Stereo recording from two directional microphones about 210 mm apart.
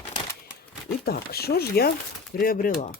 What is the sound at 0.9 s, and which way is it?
Speech, 45° left (ahead or behind).